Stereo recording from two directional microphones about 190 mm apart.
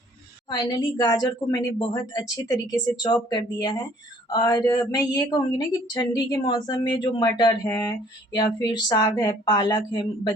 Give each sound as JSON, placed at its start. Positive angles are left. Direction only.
{"t": 0.5, "sound": "a woman's voice", "side_deg": 20}